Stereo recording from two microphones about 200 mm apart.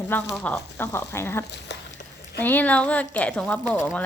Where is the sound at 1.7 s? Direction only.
60° left (ahead or behind).